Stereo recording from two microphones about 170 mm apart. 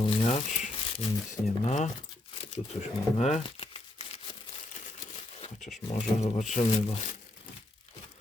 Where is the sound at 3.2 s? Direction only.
40° left (ahead or behind).